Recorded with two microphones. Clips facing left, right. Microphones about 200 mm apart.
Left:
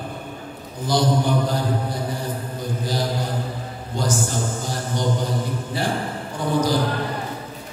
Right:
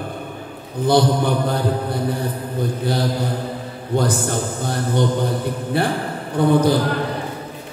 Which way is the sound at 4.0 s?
60° right (ahead or behind).